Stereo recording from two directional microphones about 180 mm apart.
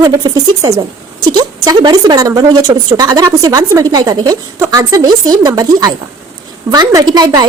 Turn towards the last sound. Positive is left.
turn(degrees=-20)  # may be behind; listen again after turning